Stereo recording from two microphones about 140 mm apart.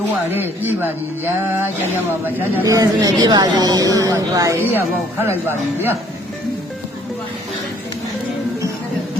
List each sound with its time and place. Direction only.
0.3 s a woman's voice: 15° right (ahead or behind)